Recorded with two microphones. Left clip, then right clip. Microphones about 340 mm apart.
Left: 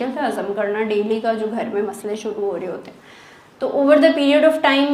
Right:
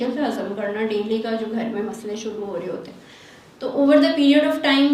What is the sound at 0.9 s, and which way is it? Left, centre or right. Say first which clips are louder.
Speech: left 4 dB; left.